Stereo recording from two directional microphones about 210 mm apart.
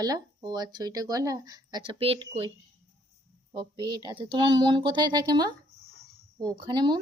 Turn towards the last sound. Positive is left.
turn(degrees=-20)  # may be behind; listen again after turning